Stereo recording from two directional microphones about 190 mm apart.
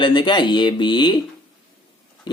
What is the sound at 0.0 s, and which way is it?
Speech, 25° left (ahead or behind).